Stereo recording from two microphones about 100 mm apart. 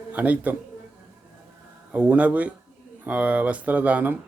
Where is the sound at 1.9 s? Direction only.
15° right (ahead or behind).